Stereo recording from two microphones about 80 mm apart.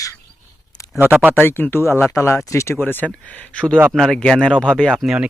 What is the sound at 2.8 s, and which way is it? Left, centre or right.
Speech, left.